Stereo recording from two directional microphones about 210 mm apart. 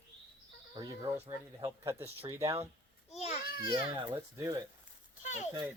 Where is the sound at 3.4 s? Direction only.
45° left (ahead or behind).